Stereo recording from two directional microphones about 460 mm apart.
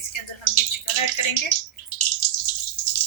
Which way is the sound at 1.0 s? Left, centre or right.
Left.